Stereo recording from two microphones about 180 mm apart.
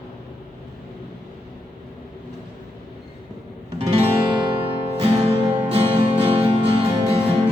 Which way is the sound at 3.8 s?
35° right (ahead or behind).